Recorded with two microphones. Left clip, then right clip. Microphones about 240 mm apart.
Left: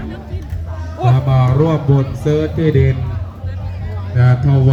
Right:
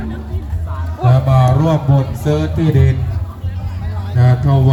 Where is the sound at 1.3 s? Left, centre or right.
Right.